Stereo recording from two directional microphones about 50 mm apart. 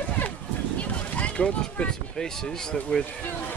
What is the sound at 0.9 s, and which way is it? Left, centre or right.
Speech, left.